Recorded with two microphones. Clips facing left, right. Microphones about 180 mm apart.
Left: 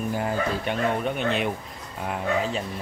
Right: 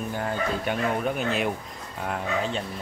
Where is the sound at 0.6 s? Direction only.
Centre (ahead or behind).